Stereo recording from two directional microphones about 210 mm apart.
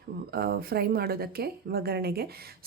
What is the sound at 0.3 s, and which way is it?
Speech, 45° right (ahead or behind).